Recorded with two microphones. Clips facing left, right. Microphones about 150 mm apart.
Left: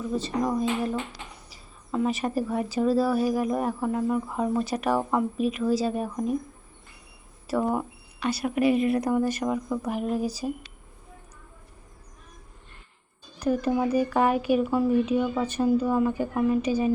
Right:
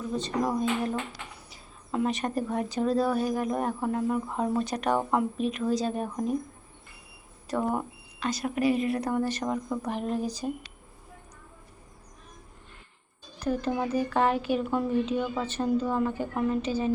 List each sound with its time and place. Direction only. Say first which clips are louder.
0.2 s a woman's voice: even; centre (ahead or behind)
7.4 s speech: left 3 dB; 5° left (ahead or behind)
8.6 s a woman's voice: left 3 dB; 35° right (ahead or behind)
8.9 s speech: left 4 dB; 10° left (ahead or behind)
13.4 s speech: left 4 dB; 10° left (ahead or behind)